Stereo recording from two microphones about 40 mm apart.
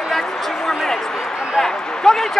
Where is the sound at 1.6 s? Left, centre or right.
Centre.